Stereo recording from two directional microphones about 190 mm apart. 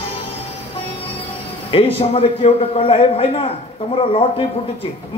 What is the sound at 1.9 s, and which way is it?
Speech, 30° left (ahead or behind).